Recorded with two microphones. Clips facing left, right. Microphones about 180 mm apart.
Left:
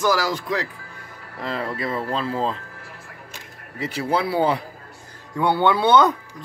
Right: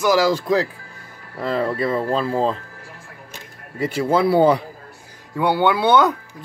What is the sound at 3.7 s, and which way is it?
Speech, 50° right (ahead or behind).